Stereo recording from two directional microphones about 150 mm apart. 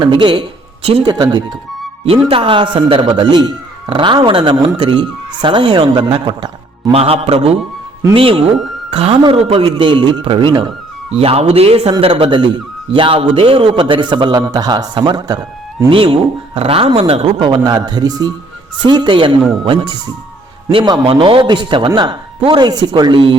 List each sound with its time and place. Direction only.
0.0 s a man's voice: 35° right (ahead or behind)
2.0 s a man's voice: 35° right (ahead or behind)
6.9 s a man's voice: 40° right (ahead or behind)